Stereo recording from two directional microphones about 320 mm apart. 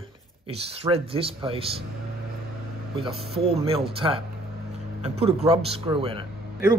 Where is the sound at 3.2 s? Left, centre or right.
Centre.